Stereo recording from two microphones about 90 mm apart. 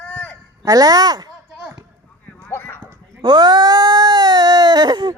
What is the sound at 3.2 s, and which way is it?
Cat, 55° right (ahead or behind).